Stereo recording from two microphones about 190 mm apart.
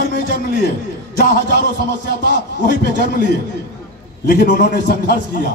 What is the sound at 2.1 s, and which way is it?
A man's voice, 60° left (ahead or behind).